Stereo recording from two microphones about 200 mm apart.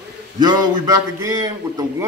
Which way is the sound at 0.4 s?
20° right (ahead or behind).